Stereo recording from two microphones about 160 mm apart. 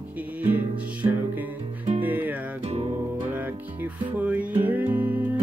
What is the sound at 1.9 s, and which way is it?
Music, 10° right (ahead or behind).